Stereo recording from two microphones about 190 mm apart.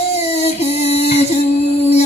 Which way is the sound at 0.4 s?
30° left (ahead or behind).